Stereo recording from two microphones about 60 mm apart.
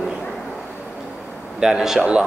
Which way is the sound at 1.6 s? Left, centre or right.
Centre.